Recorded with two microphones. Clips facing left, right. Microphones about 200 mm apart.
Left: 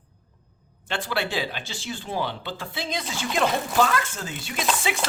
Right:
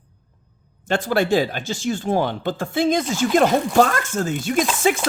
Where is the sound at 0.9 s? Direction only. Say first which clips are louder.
Right 9 dB; 45° right (ahead or behind).